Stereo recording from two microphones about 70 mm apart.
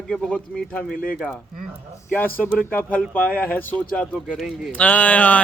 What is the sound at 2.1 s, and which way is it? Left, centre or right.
Speech, left.